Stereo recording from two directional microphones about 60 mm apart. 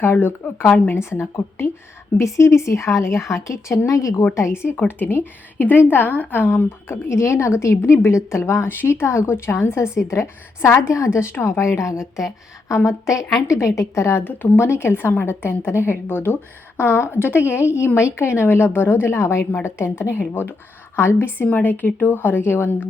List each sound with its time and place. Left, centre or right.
0.0 s a woman's voice: left
2.1 s speech: left
4.4 s speech: left
4.9 s a woman's voice: left
14.3 s a woman's voice: left